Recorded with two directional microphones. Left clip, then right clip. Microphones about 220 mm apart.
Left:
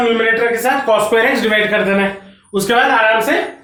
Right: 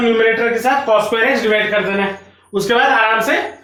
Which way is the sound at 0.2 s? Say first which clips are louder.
Even; 15° left (ahead or behind).